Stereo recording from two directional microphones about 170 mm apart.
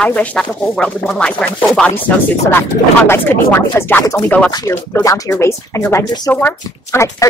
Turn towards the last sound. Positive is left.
turn(degrees=20)  # may be behind; listen again after turning